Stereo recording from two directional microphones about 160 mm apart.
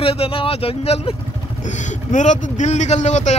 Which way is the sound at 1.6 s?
50° left (ahead or behind).